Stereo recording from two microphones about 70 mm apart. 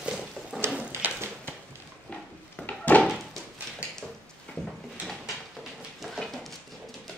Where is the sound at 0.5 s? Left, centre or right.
Centre.